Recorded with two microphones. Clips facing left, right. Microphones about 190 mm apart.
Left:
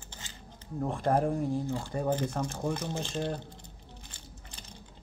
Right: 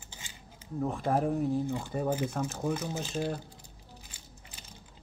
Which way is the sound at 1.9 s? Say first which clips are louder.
Left 1 dB; 5° right (ahead or behind).